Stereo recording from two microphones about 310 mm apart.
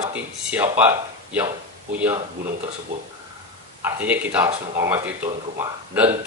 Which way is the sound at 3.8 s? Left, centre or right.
Centre.